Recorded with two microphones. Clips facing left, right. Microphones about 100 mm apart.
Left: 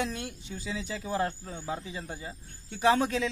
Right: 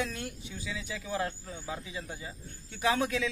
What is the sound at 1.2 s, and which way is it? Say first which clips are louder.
Speech: left 4 dB; 35° left (ahead or behind).